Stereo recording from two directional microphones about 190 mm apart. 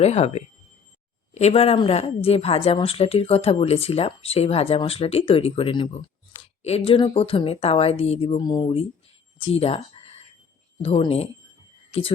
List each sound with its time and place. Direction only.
0.0 s a woman's voice: 35° left (ahead or behind)
10.8 s a woman's voice: 30° left (ahead or behind)